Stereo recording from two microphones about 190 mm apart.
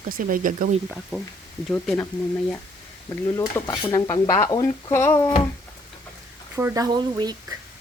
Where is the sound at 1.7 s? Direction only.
10° left (ahead or behind).